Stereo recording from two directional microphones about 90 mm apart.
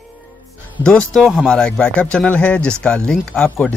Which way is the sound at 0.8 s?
10° left (ahead or behind).